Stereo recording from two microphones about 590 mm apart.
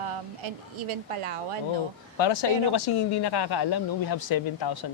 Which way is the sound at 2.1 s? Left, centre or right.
Left.